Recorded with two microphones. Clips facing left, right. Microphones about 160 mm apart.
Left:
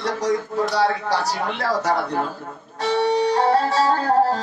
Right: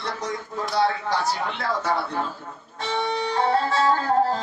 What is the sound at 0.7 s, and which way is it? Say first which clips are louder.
Speech: even; 40° left (ahead or behind).